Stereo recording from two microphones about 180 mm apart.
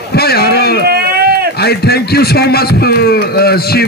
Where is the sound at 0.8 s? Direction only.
60° right (ahead or behind).